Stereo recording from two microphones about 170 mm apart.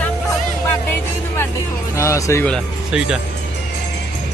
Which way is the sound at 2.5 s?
Centre (ahead or behind).